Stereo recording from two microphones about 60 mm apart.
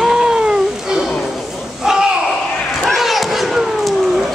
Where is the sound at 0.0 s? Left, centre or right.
Centre.